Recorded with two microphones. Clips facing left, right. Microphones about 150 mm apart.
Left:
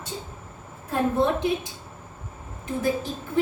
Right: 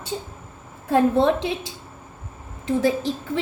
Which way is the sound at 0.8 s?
90° right.